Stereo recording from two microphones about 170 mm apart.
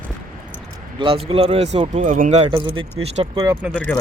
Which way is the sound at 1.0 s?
35° right (ahead or behind).